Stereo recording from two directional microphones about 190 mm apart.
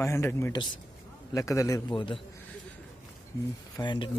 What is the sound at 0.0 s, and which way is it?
Speech, 15° left (ahead or behind).